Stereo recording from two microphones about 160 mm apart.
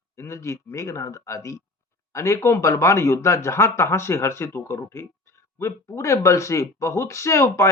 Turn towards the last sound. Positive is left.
turn(degrees=15)  # may be behind; listen again after turning